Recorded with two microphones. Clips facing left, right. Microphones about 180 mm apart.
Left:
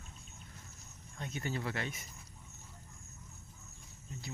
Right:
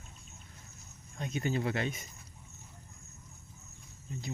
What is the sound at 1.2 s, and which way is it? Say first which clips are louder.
Speech: right 6 dB; 20° right (ahead or behind).